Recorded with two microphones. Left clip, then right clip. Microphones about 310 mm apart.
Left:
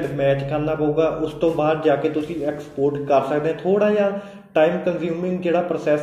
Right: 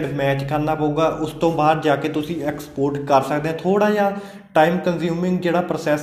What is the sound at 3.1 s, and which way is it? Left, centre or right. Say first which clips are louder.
Speech: right 2 dB; right.